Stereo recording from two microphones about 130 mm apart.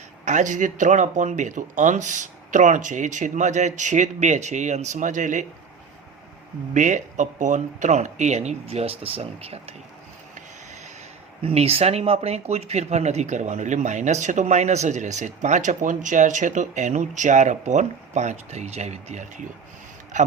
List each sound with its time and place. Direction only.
0.3 s speech: 70° right (ahead or behind)
6.7 s speech: 70° right (ahead or behind); by 9.7 s 50° right (ahead or behind)
11.4 s speech: 50° right (ahead or behind)
20.1 s a man's voice: 70° right (ahead or behind)